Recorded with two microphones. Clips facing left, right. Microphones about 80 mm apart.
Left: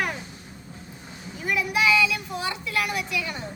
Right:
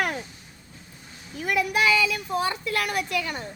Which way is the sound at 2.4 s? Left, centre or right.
Right.